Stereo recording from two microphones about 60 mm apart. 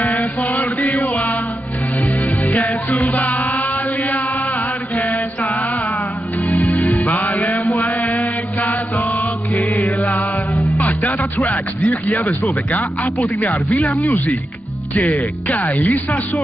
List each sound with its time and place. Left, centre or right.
0.4 s chant: left
3.0 s music: left
6.5 s music: left
8.0 s mantra: left
9.5 s music: left
10.5 s music: centre
11.4 s speech: left